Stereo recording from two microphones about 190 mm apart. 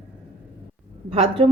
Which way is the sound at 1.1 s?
30° right (ahead or behind).